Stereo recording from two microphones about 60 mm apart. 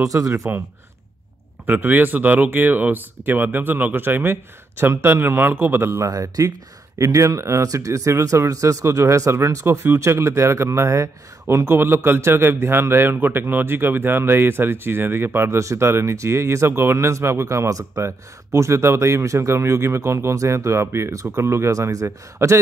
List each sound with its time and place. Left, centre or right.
0.0 s speech: right
1.7 s speech: right
6.0 s speech: right
21.7 s speech: right
22.0 s speech: right